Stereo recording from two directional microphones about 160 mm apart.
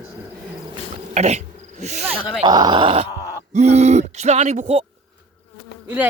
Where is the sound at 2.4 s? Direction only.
25° right (ahead or behind).